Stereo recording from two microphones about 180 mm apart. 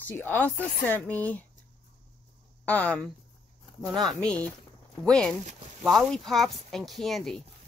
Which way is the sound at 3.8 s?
Centre (ahead or behind).